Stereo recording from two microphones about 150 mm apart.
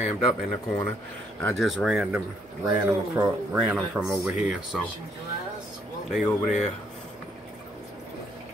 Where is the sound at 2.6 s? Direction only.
20° right (ahead or behind).